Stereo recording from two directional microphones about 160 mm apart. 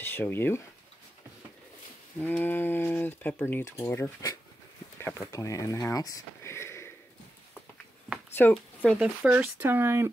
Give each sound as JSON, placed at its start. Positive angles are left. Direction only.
{"t": 0.0, "sound": "speech", "side_deg": 15}
{"t": 2.1, "sound": "speech", "side_deg": 10}
{"t": 8.4, "sound": "speech", "side_deg": 10}
{"t": 9.0, "sound": "speech", "side_deg": -10}